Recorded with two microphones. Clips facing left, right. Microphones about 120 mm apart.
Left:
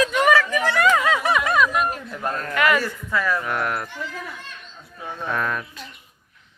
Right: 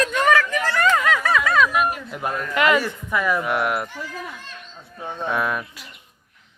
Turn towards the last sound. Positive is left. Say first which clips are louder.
# right 2 dB
turn(degrees=-10)  # may be behind; listen again after turning